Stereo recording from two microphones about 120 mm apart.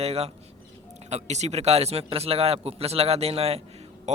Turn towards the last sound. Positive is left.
turn(degrees=-70)  # may be behind; listen again after turning